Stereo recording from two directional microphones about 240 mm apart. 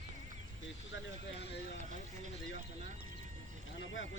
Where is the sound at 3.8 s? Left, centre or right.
Left.